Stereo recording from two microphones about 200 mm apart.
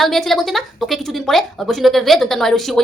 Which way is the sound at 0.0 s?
Centre (ahead or behind).